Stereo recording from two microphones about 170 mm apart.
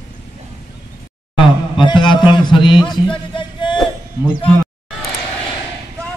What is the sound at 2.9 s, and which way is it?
Music, 30° left (ahead or behind).